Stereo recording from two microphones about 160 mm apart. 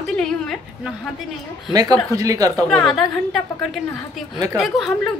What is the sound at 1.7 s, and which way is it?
Speech, 25° right (ahead or behind).